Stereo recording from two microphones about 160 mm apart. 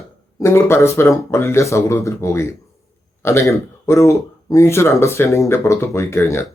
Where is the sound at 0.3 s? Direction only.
15° left (ahead or behind).